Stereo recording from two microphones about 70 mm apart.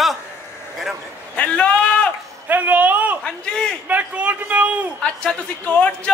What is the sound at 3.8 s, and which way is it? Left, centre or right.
Speech, right.